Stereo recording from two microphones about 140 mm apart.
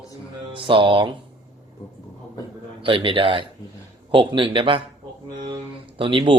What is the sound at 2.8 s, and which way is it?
A man's voice, 40° right (ahead or behind).